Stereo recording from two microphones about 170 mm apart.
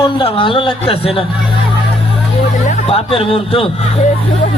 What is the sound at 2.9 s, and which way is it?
Speech, 35° left (ahead or behind).